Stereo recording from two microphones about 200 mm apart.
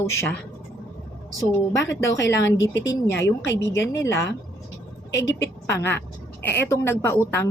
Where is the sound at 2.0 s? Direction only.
65° left (ahead or behind).